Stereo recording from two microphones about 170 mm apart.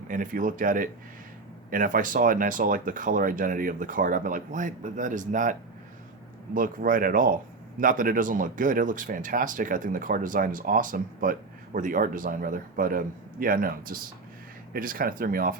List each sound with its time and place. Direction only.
0.1 s speech: 50° right (ahead or behind)